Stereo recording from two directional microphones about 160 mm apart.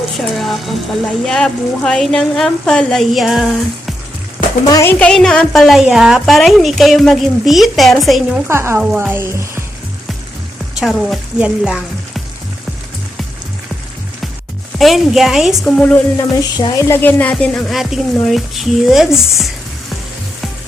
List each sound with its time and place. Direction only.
0.2 s a woman's voice: centre (ahead or behind)
4.6 s a woman's voice: 20° left (ahead or behind); by 8.4 s centre (ahead or behind)
8.4 s speech: 15° right (ahead or behind)
10.8 s frying: centre (ahead or behind)
14.8 s a woman's voice: centre (ahead or behind)
16.1 s a woman's voice: 25° left (ahead or behind); by 19.5 s centre (ahead or behind)